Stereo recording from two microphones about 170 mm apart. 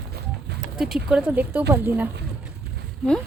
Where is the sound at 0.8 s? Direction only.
5° right (ahead or behind).